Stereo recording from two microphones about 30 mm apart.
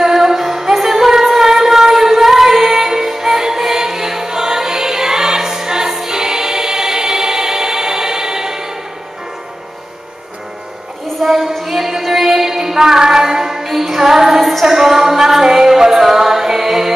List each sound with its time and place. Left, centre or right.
0.0 s music: centre
5.9 s choir: centre
11.2 s a sound: centre
11.6 s music: centre
13.7 s music: centre
14.4 s music: centre
14.7 s music: centre